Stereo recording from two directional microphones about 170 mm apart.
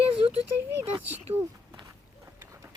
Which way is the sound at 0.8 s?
10° right (ahead or behind).